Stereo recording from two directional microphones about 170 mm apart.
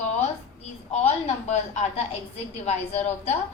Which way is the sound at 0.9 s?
40° left (ahead or behind).